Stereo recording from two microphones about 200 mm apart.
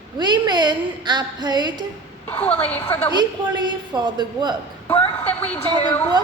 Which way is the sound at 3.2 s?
20° right (ahead or behind).